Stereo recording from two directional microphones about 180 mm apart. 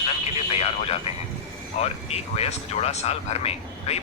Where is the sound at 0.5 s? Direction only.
35° left (ahead or behind).